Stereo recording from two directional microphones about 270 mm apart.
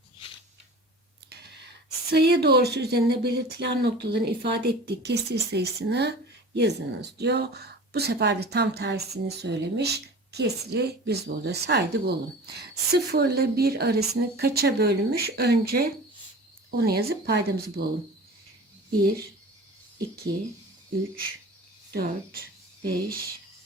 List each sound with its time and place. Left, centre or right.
1.3 s speech: right
21.9 s speech: right